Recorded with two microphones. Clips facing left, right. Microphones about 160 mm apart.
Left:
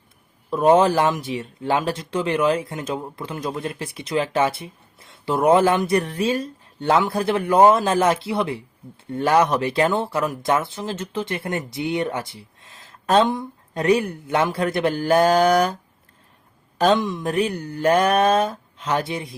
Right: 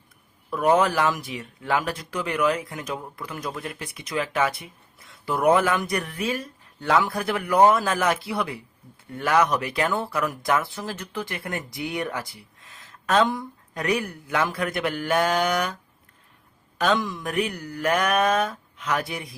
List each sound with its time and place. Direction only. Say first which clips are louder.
0.5 s speech: left 5 dB; 25° left (ahead or behind)